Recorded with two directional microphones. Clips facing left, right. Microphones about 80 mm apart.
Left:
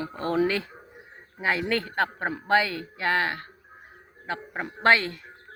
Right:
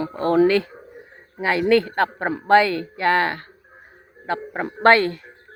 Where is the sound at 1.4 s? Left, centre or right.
Right.